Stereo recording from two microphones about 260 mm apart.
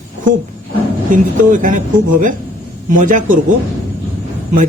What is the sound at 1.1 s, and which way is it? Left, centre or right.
Speech, right.